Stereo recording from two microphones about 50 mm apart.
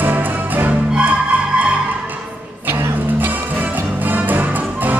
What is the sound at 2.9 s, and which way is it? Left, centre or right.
Music, right.